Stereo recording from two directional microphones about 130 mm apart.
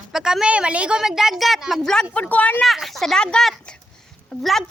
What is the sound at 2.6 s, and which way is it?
A woman's voice, centre (ahead or behind).